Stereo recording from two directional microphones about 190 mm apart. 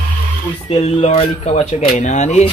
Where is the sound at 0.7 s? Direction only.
30° left (ahead or behind).